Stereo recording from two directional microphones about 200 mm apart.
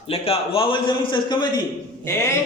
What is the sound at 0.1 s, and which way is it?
A man's voice, 30° left (ahead or behind).